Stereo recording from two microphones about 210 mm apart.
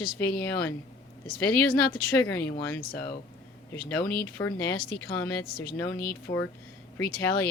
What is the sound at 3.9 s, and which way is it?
Speech, 5° left (ahead or behind).